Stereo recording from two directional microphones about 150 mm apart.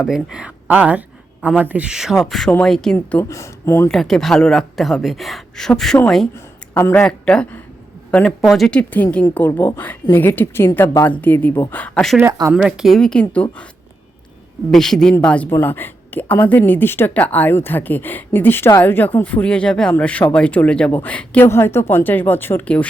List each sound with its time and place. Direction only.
0.0 s speech: 5° right (ahead or behind); by 3.9 s 15° left (ahead or behind)
3.9 s speech: centre (ahead or behind)
6.7 s speech: 15° left (ahead or behind)
7.1 s speech: 5° left (ahead or behind)
12.2 s speech: 20° right (ahead or behind)
12.6 s speech: centre (ahead or behind)
14.7 s speech: 5° left (ahead or behind)